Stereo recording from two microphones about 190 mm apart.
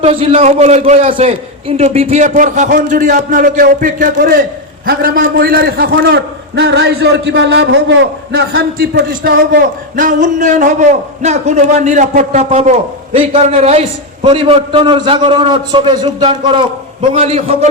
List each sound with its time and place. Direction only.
0.0 s a man's voice: 30° right (ahead or behind); by 8.6 s 85° right
8.8 s a man's voice: 50° right (ahead or behind); by 17.7 s 30° right (ahead or behind)